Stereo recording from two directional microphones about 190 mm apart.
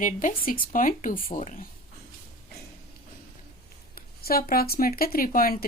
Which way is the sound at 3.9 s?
50° left (ahead or behind).